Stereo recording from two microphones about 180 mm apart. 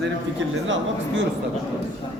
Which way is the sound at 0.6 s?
90° right.